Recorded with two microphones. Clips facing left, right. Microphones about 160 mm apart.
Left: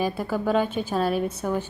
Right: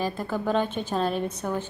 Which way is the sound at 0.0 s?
10° left (ahead or behind).